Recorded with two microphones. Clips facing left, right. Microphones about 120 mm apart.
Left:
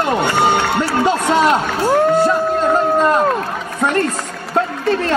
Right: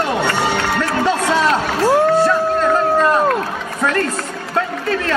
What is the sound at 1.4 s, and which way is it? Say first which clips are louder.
Speech: left 1 dB; 20° left (ahead or behind).